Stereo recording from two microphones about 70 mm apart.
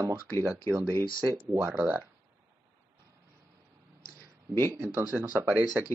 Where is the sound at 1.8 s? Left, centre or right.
Right.